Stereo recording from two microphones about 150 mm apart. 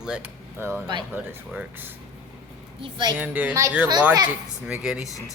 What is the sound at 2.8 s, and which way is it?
Speech, 35° right (ahead or behind).